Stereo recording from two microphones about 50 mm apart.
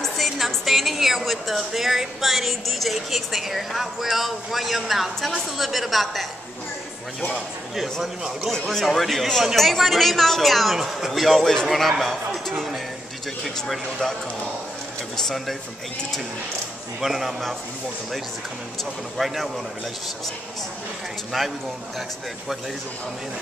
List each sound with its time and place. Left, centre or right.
0.0 s a woman's voice: centre
15.2 s a woman's voice: centre
17.0 s a woman's voice: centre
19.1 s a woman's voice: centre
21.3 s a woman's voice: centre